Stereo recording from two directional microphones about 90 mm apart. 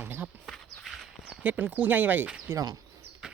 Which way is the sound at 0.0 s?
20° right (ahead or behind).